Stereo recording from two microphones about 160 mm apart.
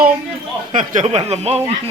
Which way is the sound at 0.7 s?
50° right (ahead or behind).